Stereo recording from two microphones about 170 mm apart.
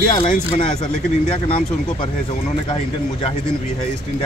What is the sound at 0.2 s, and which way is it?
Speech, 45° left (ahead or behind).